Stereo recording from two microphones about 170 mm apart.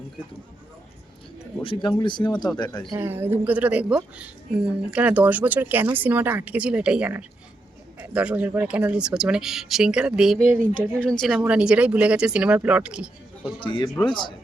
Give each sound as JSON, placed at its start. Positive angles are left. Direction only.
{"t": 1.6, "sound": "speech", "side_deg": 30}
{"t": 2.9, "sound": "a woman's voice", "side_deg": -15}
{"t": 13.6, "sound": "speech", "side_deg": 30}